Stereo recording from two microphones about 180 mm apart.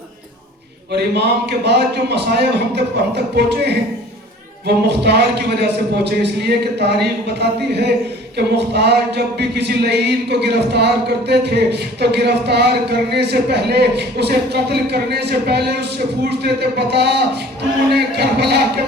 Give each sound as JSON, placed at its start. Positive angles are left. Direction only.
{"t": 0.9, "sound": "a man's voice", "side_deg": -65}
{"t": 8.4, "sound": "a sound", "side_deg": -65}
{"t": 16.4, "sound": "a man's voice", "side_deg": -65}